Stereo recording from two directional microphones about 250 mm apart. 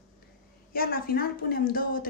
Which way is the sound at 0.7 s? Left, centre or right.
Left.